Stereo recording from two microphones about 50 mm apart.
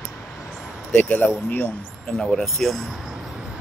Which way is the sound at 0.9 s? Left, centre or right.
Left.